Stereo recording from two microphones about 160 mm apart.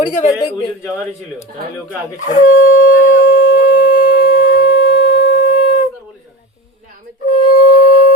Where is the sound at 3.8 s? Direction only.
55° left (ahead or behind).